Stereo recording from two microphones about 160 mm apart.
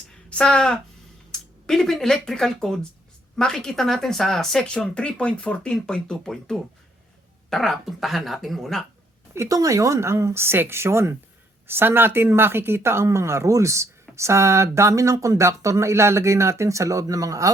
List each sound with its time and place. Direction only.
0.3 s speech: 5° left (ahead or behind)
9.3 s speech: 20° right (ahead or behind)